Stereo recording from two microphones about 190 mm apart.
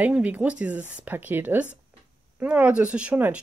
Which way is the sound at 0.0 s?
10° right (ahead or behind).